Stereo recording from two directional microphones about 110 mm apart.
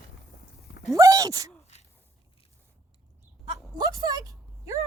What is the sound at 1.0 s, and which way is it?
Speech, 30° right (ahead or behind).